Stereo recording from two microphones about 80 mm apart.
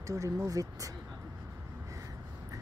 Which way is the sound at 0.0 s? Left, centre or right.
Right.